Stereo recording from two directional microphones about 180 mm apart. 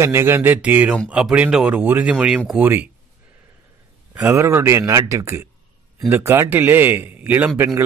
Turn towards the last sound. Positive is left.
turn(degrees=-10)  # may be behind; listen again after turning